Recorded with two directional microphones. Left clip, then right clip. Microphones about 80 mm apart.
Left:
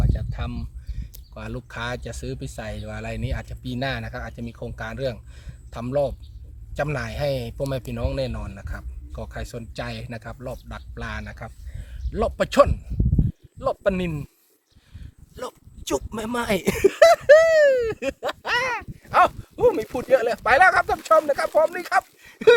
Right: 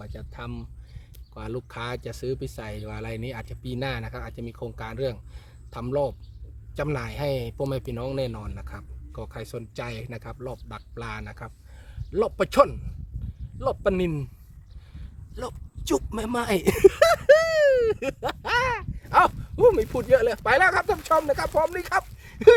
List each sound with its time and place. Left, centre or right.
0.0 s speech: right
11.3 s a sound: right
12.2 s speech: right
15.4 s speech: right
16.7 s a sound: right
19.1 s speech: right
21.4 s speech: right
21.8 s speech: right